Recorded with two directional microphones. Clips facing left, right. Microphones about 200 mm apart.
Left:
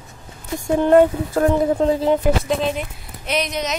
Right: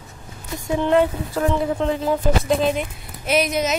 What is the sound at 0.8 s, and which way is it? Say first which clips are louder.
Speech: left 5 dB; 45° left (ahead or behind).